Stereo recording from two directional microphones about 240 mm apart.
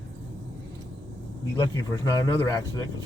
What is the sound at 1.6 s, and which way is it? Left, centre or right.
Speech, centre.